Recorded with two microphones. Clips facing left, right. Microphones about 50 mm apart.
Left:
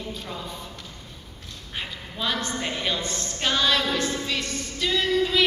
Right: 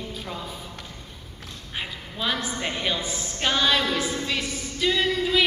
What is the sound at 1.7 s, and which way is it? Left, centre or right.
A woman's voice, centre.